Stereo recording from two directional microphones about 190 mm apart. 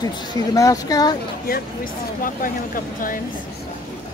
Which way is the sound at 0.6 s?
20° left (ahead or behind).